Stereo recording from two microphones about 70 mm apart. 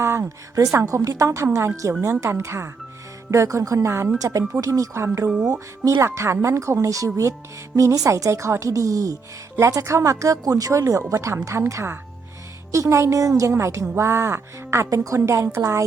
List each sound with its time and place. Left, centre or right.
0.0 s a woman's voice: right
4.2 s a woman's voice: right
4.9 s a woman's voice: right
14.8 s a woman's voice: right